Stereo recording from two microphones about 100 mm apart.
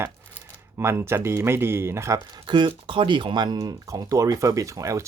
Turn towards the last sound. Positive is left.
turn(degrees=-30)  # may be behind; listen again after turning